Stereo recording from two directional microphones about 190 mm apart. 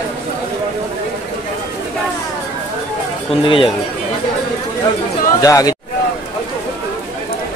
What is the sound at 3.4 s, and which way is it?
Speech, 25° left (ahead or behind).